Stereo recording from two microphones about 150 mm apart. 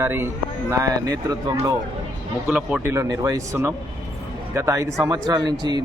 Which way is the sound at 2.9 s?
20° right (ahead or behind).